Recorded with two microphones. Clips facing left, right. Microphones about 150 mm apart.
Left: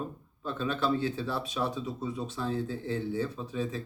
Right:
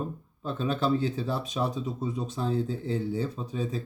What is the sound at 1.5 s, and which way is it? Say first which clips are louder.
Speech: right 2 dB; 40° right (ahead or behind).